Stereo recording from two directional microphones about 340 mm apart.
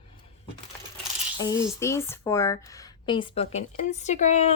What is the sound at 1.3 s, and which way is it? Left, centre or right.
Speech, centre.